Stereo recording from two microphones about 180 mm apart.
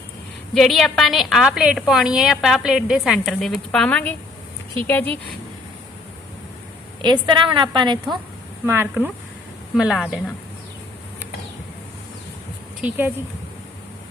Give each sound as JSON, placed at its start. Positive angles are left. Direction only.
{"t": 0.5, "sound": "a woman's voice", "side_deg": 0}
{"t": 7.0, "sound": "a woman's voice", "side_deg": -25}
{"t": 8.6, "sound": "a woman's voice", "side_deg": -15}
{"t": 12.8, "sound": "speech", "side_deg": -10}